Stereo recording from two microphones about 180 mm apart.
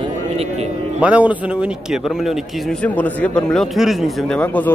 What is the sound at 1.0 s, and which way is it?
A man's voice, 5° right (ahead or behind).